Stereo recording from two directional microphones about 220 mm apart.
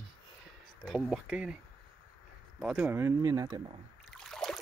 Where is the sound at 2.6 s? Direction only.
5° right (ahead or behind).